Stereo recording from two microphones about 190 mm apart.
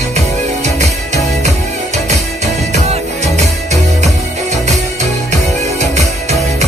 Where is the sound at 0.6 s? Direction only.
35° right (ahead or behind).